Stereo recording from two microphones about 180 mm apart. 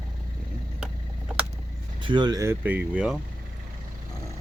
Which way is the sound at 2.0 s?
25° right (ahead or behind).